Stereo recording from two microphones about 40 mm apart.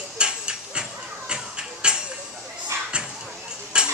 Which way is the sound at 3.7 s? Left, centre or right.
Right.